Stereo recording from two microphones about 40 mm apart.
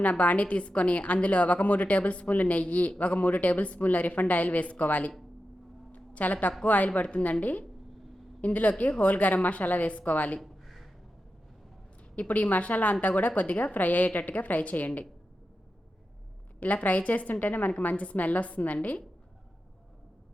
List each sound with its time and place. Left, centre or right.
0.0 s a woman's voice: left
5.9 s a sound: left
6.7 s a woman's voice: left
10.4 s a sound: centre
12.3 s a woman's voice: left
16.6 s a woman's voice: left
17.8 s a woman's voice: left